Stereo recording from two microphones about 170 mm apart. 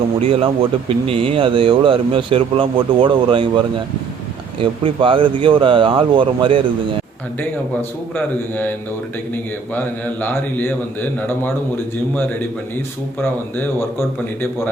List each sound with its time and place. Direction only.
0.2 s speech: 35° right (ahead or behind)
4.6 s speech: 30° right (ahead or behind)
7.3 s a man's voice: 10° left (ahead or behind)